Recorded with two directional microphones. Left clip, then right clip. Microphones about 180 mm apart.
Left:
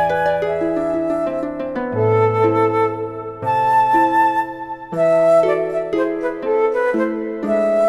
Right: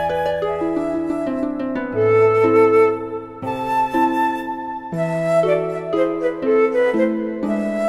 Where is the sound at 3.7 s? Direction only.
25° right (ahead or behind).